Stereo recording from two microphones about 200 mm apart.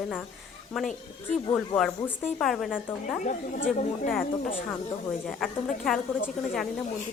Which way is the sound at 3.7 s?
40° left (ahead or behind).